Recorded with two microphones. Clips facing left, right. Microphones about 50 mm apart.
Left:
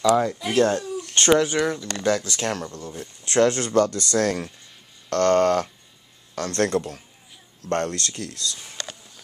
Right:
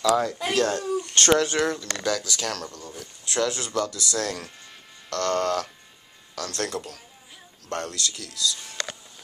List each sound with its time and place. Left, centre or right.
0.0 s speech: centre
0.6 s speech: left
2.0 s speech: left
3.3 s speech: left